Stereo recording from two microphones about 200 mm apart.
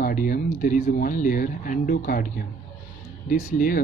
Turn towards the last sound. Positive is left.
turn(degrees=45)  # may be behind; listen again after turning